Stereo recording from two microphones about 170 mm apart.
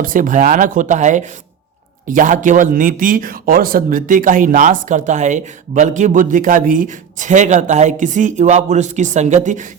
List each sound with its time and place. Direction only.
0.0 s speech: 50° right (ahead or behind)